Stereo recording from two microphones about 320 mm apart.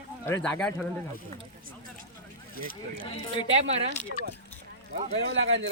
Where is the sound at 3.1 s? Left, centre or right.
Centre.